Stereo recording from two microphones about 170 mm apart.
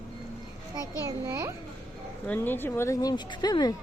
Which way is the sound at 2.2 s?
10° left (ahead or behind).